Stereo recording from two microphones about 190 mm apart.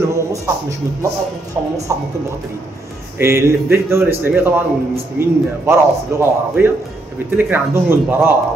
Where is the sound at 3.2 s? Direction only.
15° right (ahead or behind).